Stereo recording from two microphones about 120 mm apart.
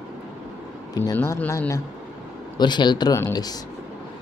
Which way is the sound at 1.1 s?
20° left (ahead or behind).